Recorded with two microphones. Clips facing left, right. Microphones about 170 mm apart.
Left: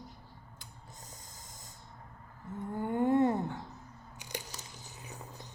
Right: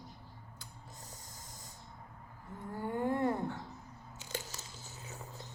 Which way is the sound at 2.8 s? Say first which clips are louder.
Left 6 dB; 20° left (ahead or behind).